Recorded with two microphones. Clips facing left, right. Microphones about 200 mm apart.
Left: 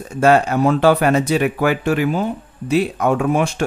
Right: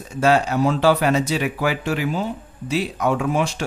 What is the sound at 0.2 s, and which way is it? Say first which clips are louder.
Speech: left 4 dB; 55° left (ahead or behind).